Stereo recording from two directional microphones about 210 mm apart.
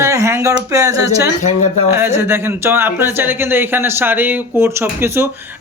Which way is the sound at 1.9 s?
10° right (ahead or behind).